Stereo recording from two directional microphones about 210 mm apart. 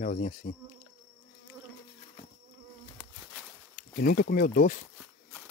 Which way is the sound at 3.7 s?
40° left (ahead or behind).